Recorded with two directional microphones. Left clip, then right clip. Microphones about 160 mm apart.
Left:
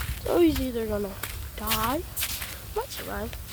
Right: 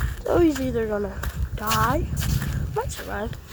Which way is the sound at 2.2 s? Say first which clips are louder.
Even; 50° right (ahead or behind).